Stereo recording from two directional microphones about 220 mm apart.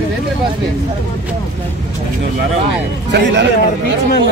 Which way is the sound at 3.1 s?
50° right (ahead or behind).